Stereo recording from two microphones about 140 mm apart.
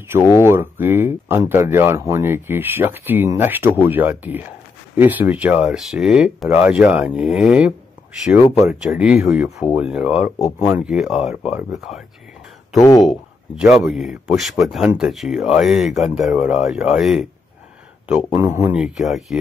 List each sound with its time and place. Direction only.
0.4 s speech: 15° right (ahead or behind)
12.7 s speech: 25° left (ahead or behind)
13.0 s speech: centre (ahead or behind)
18.3 s speech: 20° right (ahead or behind)
18.8 s speech: 5° right (ahead or behind)